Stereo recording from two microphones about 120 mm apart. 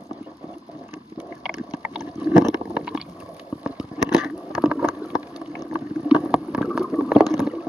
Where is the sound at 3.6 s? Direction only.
10° right (ahead or behind).